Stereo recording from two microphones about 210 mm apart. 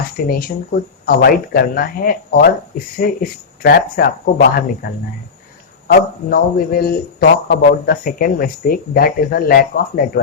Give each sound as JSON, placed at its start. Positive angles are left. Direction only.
{"t": 0.3, "sound": "a man's voice", "side_deg": 45}
{"t": 5.9, "sound": "a man's voice", "side_deg": 45}